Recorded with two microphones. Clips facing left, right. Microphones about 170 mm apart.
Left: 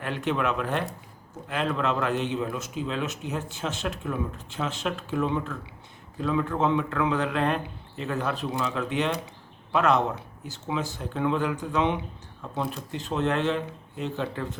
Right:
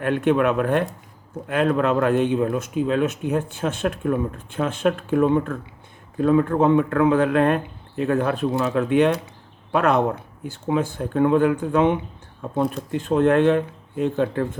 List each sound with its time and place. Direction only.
0.0 s speech: 55° right (ahead or behind)